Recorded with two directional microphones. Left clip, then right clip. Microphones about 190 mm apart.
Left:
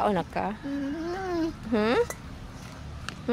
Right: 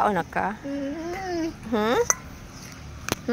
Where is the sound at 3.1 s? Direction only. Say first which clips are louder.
Right 10 dB; 45° right (ahead or behind).